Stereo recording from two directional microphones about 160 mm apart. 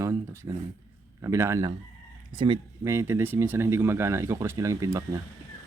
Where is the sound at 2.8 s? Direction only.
15° right (ahead or behind).